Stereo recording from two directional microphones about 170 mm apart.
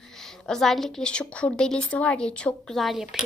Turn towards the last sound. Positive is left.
turn(degrees=0)  # may be behind; listen again after turning